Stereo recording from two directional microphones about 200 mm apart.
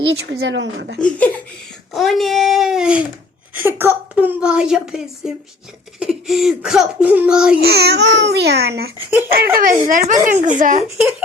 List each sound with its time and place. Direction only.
0.3 s speech: 60° right (ahead or behind)
0.9 s a woman's voice: 5° left (ahead or behind)
7.6 s speech: 55° right (ahead or behind)
9.0 s speech: 10° right (ahead or behind)
9.6 s a woman's voice: 45° right (ahead or behind)
10.8 s a woman's voice: 5° right (ahead or behind)